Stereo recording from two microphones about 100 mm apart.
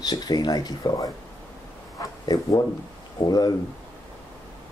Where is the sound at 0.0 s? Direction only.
45° left (ahead or behind).